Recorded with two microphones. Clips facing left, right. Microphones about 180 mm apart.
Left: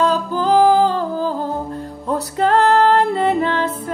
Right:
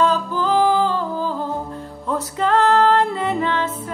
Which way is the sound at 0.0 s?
35° left (ahead or behind).